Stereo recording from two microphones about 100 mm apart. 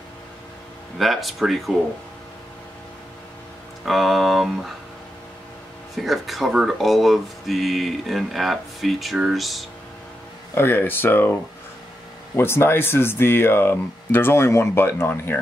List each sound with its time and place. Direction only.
0.9 s speech: centre (ahead or behind)
3.8 s speech: centre (ahead or behind)
5.9 s speech: centre (ahead or behind)
10.5 s speech: 20° left (ahead or behind)
12.4 s speech: 25° left (ahead or behind)